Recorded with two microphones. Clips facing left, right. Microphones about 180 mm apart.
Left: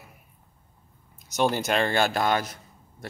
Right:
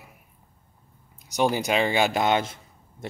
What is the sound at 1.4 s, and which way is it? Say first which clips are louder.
Speech: right 1 dB; 15° right (ahead or behind).